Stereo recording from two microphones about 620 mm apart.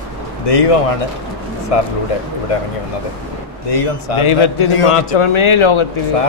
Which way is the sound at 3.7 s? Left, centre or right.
Left.